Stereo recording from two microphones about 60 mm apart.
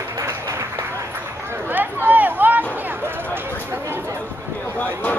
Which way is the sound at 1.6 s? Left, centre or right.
Right.